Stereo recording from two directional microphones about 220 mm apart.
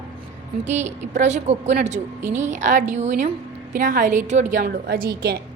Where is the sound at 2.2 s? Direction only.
10° right (ahead or behind).